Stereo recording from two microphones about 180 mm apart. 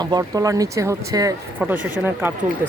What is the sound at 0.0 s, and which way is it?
Speech, 20° right (ahead or behind).